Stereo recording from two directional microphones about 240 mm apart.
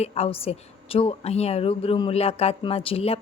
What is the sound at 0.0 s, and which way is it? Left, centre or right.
A woman's voice, left.